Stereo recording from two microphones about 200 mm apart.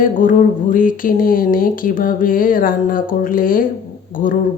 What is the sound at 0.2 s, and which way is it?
Speech, 40° left (ahead or behind).